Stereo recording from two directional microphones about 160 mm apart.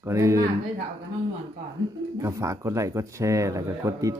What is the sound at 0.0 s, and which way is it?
Speech, 20° right (ahead or behind).